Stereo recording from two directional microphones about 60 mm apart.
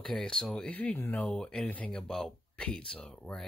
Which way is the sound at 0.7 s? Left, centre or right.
Left.